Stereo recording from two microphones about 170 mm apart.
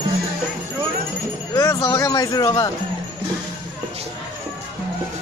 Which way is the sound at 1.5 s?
20° left (ahead or behind).